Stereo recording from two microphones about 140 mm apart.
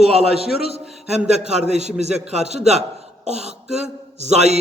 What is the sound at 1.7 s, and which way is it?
A man's voice, 50° right (ahead or behind).